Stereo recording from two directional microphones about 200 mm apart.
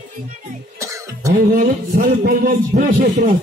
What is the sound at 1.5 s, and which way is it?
A man's voice, 50° right (ahead or behind).